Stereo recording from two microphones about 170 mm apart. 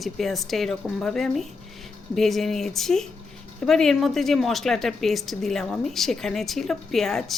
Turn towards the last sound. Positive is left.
turn(degrees=0)  # may be behind; listen again after turning